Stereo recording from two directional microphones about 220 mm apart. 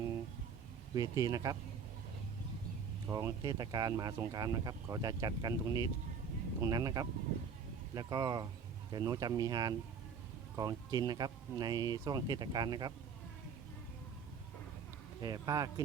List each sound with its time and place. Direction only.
0.9 s speech: 15° right (ahead or behind)
3.1 s speech: 15° right (ahead or behind)
15.2 s speech: 15° right (ahead or behind)